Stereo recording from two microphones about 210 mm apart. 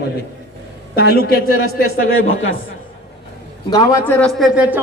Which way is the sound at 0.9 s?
45° left (ahead or behind).